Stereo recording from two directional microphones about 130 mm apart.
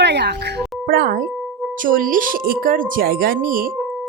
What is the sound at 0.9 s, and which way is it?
Speech, 90° right.